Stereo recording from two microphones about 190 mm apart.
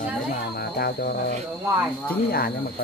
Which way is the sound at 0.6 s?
55° left (ahead or behind).